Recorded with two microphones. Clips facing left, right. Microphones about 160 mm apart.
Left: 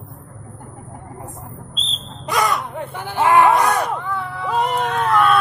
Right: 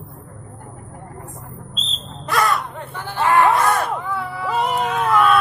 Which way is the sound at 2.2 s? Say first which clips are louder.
Even; 15° left (ahead or behind).